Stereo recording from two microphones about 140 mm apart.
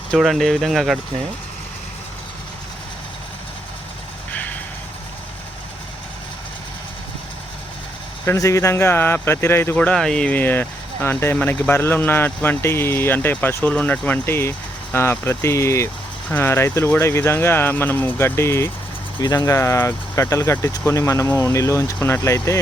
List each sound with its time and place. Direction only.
0.1 s speech: centre (ahead or behind)
8.2 s speech: 20° left (ahead or behind)
19.2 s speech: 30° left (ahead or behind)